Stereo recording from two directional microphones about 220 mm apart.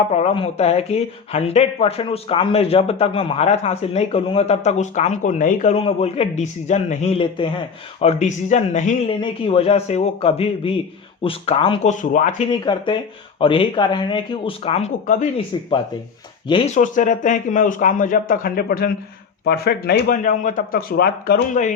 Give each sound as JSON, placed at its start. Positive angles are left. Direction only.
{"t": 0.1, "sound": "speech", "side_deg": 30}
{"t": 12.5, "sound": "speech", "side_deg": 20}
{"t": 16.5, "sound": "speech", "side_deg": 30}